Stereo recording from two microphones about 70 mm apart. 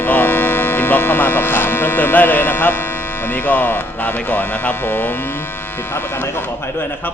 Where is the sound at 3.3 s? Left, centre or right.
Left.